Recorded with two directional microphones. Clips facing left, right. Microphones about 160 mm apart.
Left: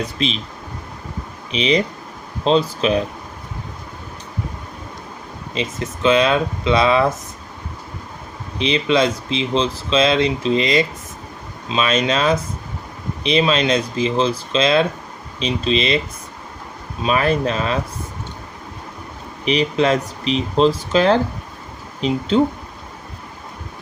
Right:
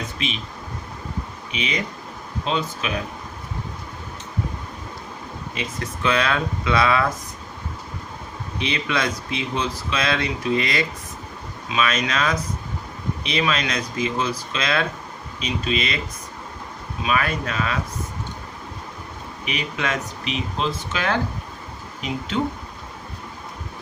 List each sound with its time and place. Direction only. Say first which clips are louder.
0.0 s speech: left 6 dB; 35° left (ahead or behind)
1.5 s speech: left 9 dB; 30° left (ahead or behind)
5.5 s speech: left 6 dB; 20° left (ahead or behind)
8.5 s speech: left 8 dB; 25° left (ahead or behind)
17.0 s speech: left 6 dB; 30° left (ahead or behind)
19.5 s speech: left 10 dB; 30° left (ahead or behind)